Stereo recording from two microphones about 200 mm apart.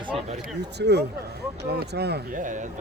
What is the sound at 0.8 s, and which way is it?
Speech, 55° right (ahead or behind).